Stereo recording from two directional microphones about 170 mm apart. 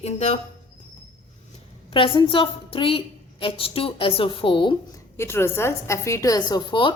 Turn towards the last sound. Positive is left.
turn(degrees=30)  # may be behind; listen again after turning